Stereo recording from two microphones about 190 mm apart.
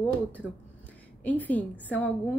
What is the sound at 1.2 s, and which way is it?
Speech, 10° left (ahead or behind).